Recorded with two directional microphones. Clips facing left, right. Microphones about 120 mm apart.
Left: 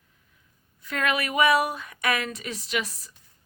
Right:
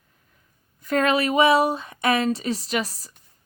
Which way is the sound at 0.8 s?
40° right (ahead or behind).